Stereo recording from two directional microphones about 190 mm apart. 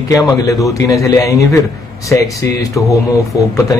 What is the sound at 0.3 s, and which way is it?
A man's voice, 15° left (ahead or behind).